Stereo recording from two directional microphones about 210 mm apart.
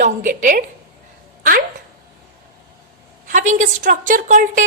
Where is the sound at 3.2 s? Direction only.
35° right (ahead or behind).